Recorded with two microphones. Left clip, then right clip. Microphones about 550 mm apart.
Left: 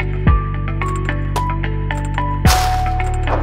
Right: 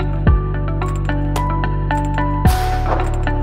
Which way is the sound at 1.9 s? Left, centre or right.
Centre.